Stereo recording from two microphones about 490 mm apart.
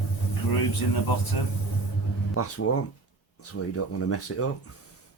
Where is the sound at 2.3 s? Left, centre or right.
Left.